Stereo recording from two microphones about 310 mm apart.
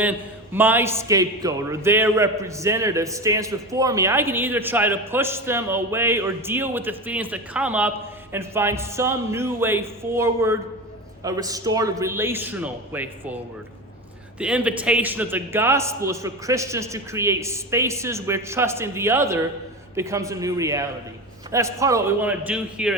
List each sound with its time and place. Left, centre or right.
0.0 s a man's voice: centre
14.3 s a man's voice: centre